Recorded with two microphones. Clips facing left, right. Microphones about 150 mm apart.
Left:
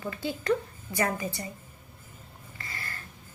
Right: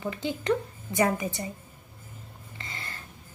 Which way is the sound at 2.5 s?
20° right (ahead or behind).